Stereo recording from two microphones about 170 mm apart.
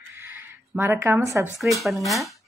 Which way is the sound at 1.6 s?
Centre (ahead or behind).